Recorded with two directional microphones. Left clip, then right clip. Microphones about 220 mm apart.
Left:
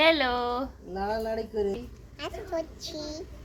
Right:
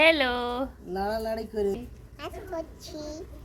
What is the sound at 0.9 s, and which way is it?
Speech, 45° right (ahead or behind).